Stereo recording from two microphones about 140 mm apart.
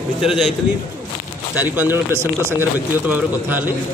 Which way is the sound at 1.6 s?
15° right (ahead or behind).